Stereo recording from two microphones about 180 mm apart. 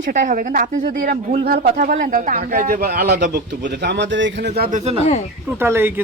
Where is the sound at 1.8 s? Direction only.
50° right (ahead or behind); by 4.5 s 85° right.